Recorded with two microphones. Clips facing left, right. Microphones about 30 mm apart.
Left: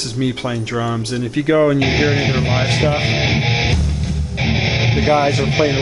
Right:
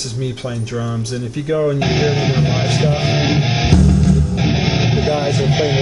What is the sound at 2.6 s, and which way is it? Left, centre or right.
Speech, left.